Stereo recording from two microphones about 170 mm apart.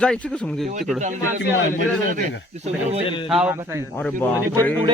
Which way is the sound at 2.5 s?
40° right (ahead or behind).